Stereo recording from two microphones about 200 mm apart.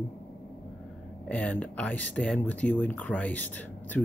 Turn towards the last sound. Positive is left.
turn(degrees=10)  # may be behind; listen again after turning